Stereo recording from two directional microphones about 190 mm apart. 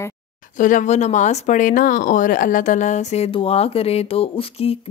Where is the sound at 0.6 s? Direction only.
40° left (ahead or behind).